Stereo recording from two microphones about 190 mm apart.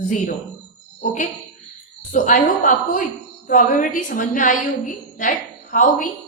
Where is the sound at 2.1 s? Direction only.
45° left (ahead or behind).